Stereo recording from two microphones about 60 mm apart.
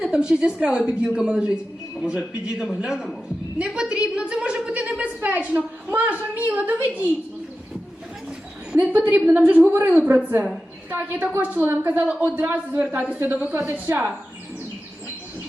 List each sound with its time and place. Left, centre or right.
0.0 s a woman's voice: centre; by 7.1 s right
8.7 s a woman's voice: right
13.9 s speech: right